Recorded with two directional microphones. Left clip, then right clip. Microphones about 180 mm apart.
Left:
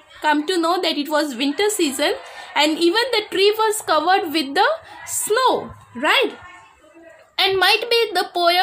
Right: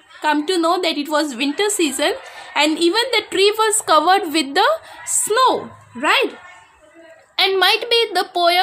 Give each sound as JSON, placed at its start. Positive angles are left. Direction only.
{"t": 0.2, "sound": "a woman's voice", "side_deg": -10}
{"t": 7.3, "sound": "a woman's voice", "side_deg": -15}